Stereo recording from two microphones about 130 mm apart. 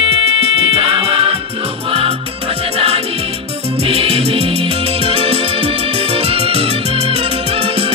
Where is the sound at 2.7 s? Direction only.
50° right (ahead or behind).